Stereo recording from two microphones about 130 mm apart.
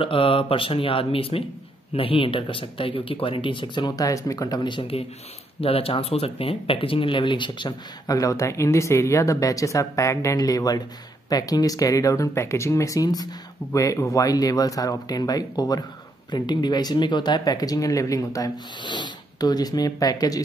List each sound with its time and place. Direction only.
0.0 s speech: 45° left (ahead or behind)